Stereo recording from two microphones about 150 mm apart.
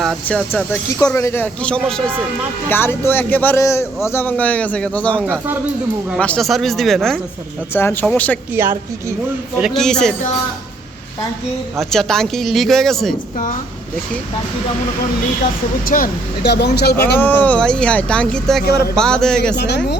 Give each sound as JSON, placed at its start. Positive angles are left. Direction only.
{"t": 0.3, "sound": "a man's voice", "side_deg": 10}
{"t": 6.1, "sound": "speech", "side_deg": 5}
{"t": 7.7, "sound": "a man's voice", "side_deg": 15}
{"t": 8.6, "sound": "a woman's voice", "side_deg": -15}
{"t": 9.6, "sound": "speech", "side_deg": 0}
{"t": 11.8, "sound": "speech", "side_deg": 5}
{"t": 15.9, "sound": "speech", "side_deg": 60}
{"t": 16.5, "sound": "speech", "side_deg": 90}
{"t": 17.2, "sound": "a man's voice", "side_deg": 15}